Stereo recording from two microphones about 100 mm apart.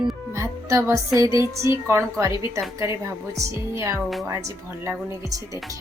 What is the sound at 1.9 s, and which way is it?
Speech, 30° right (ahead or behind).